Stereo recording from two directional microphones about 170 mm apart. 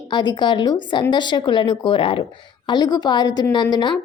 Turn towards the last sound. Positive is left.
turn(degrees=25)  # may be behind; listen again after turning